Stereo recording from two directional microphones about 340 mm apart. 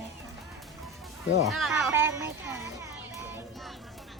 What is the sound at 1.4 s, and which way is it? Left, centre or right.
Speech, centre.